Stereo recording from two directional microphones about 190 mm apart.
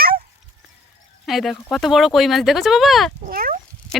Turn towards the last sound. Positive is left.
turn(degrees=-45)  # may be behind; listen again after turning